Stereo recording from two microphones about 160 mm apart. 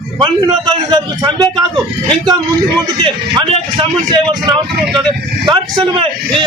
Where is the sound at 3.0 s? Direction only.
30° right (ahead or behind).